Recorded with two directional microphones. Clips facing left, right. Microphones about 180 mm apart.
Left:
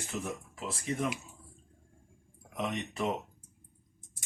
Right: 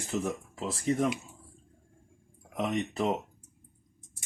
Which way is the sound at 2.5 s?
30° right (ahead or behind).